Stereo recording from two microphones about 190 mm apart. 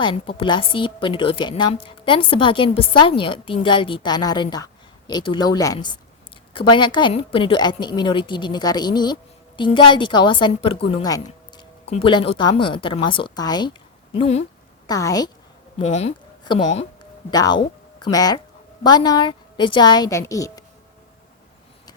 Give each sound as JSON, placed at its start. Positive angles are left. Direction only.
{"t": 0.0, "sound": "a woman's voice", "side_deg": 25}
{"t": 14.2, "sound": "speech", "side_deg": 35}
{"t": 14.8, "sound": "a woman's voice", "side_deg": 20}
{"t": 15.8, "sound": "speech", "side_deg": 35}
{"t": 16.4, "sound": "a woman's voice", "side_deg": 25}